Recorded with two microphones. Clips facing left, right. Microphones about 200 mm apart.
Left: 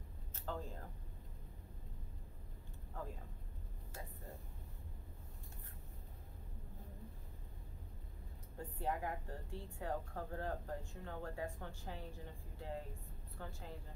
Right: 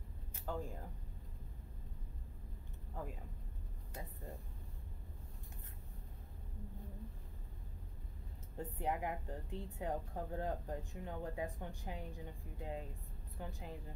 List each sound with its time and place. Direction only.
0.5 s a woman's voice: 10° right (ahead or behind)
8.5 s a woman's voice: 20° right (ahead or behind)